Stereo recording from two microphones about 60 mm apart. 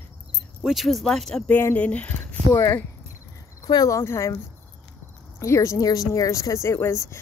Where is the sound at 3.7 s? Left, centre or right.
Left.